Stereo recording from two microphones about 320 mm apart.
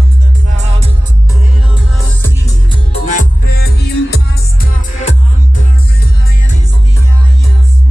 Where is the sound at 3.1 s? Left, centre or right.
Left.